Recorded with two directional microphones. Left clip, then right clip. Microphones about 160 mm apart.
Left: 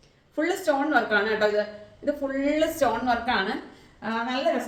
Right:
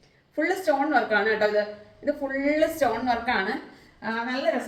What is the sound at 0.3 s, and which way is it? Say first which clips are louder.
A woman's voice: right 1 dB; 15° left (ahead or behind).